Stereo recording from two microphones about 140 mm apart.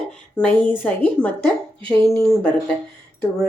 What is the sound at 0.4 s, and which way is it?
A woman's voice, 10° left (ahead or behind).